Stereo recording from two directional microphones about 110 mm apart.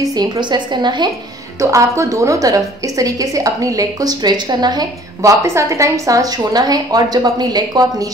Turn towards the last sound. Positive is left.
turn(degrees=-40)  # may be behind; listen again after turning